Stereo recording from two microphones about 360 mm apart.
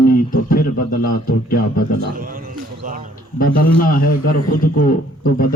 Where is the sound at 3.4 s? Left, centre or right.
Left.